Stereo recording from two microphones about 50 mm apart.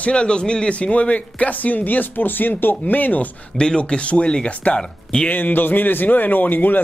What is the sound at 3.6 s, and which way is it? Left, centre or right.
Speech, centre.